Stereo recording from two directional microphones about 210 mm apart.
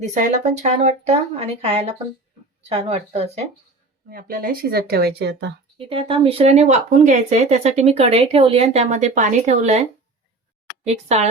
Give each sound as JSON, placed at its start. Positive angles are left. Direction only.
{"t": 0.1, "sound": "speech", "side_deg": -35}
{"t": 4.1, "sound": "speech", "side_deg": -40}
{"t": 5.7, "sound": "speech", "side_deg": -25}
{"t": 10.8, "sound": "speech", "side_deg": -30}